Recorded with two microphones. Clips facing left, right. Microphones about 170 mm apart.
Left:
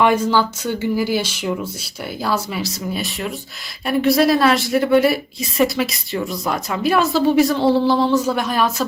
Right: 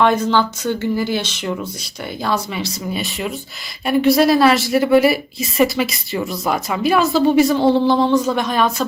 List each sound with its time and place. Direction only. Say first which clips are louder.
0.0 s a woman's voice: even; 10° left (ahead or behind)